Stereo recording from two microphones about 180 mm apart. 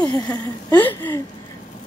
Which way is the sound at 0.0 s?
20° left (ahead or behind).